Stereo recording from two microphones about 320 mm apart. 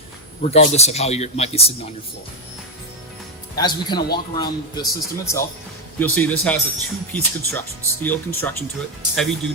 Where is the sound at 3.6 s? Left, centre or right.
Centre.